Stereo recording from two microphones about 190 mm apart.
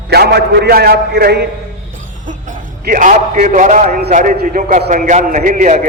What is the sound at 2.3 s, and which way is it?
A man's voice, 45° right (ahead or behind).